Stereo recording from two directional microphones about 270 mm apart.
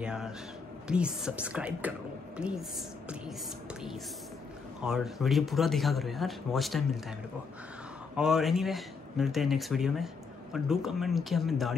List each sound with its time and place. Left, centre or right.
0.0 s speech: centre
4.8 s speech: centre
8.2 s speech: centre